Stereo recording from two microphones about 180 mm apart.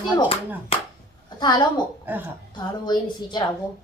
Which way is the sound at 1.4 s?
25° left (ahead or behind).